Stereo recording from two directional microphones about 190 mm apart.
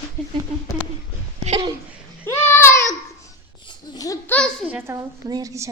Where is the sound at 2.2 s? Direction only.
10° left (ahead or behind).